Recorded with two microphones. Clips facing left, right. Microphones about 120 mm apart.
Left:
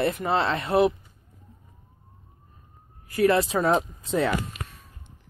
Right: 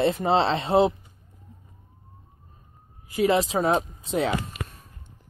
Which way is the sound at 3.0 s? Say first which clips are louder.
Left 1 dB; 20° right (ahead or behind).